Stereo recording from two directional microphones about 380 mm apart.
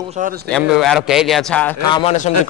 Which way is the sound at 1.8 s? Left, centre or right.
Centre.